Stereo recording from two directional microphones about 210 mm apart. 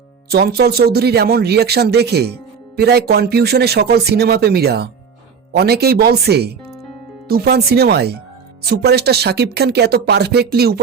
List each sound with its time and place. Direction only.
0.3 s speech: 50° right (ahead or behind)